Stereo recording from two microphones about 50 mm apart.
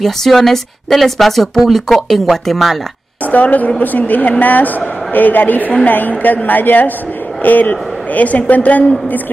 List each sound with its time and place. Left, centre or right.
0.0 s speech: centre
3.3 s a woman's voice: left